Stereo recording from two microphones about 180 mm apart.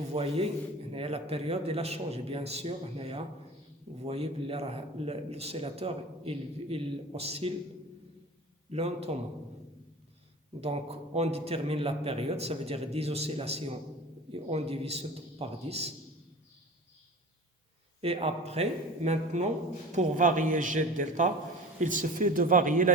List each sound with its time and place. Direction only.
0.1 s a man's voice: 35° right (ahead or behind)
8.7 s a man's voice: 35° right (ahead or behind)
10.6 s a man's voice: 35° right (ahead or behind)
18.0 s a man's voice: 35° right (ahead or behind)